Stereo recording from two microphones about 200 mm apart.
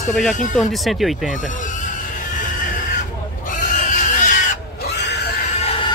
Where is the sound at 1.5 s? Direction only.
40° left (ahead or behind).